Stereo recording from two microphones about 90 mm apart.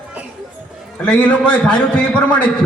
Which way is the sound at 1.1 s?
15° left (ahead or behind).